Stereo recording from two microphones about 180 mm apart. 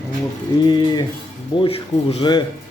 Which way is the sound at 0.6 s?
25° left (ahead or behind).